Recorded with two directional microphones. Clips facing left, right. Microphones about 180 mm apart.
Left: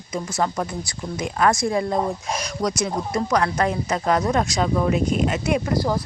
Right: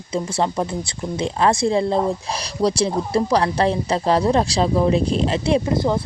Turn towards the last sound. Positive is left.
turn(degrees=-25)  # may be behind; listen again after turning